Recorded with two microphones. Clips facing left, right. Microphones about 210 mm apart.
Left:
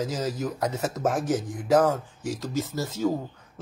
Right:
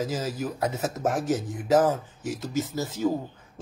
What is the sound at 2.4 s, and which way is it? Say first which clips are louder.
Speech: right 1 dB; centre (ahead or behind).